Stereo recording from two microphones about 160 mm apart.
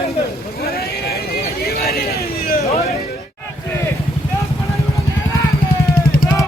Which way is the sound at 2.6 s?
40° left (ahead or behind).